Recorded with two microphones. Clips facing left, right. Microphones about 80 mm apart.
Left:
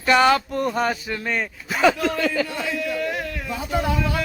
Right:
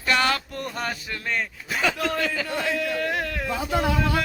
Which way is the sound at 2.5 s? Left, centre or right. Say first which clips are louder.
Even; right.